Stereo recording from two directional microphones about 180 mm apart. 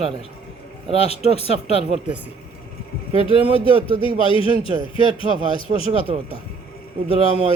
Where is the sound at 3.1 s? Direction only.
30° left (ahead or behind).